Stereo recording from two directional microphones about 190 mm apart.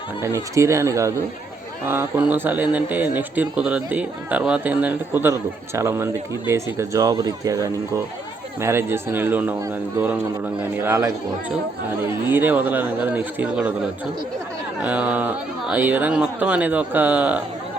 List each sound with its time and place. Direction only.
0.2 s speech: 15° right (ahead or behind)
14.8 s speech: 5° right (ahead or behind)